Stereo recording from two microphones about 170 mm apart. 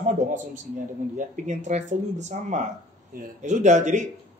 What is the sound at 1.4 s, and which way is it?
A man's voice, 45° right (ahead or behind).